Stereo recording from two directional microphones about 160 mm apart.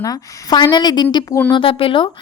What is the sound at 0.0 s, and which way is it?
Speech, 25° left (ahead or behind).